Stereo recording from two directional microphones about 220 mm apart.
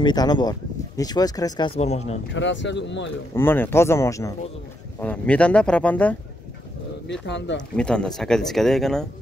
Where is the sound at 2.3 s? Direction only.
55° left (ahead or behind).